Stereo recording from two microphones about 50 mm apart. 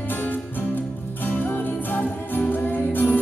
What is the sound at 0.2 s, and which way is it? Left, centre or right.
Music, left.